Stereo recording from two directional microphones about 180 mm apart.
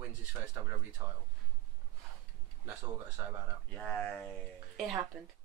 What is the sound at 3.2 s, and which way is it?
Speech, 15° right (ahead or behind).